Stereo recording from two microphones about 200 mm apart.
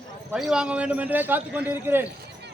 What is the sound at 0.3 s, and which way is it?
A man's voice, 5° right (ahead or behind).